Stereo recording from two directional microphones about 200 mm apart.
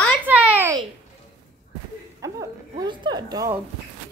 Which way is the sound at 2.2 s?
15° right (ahead or behind).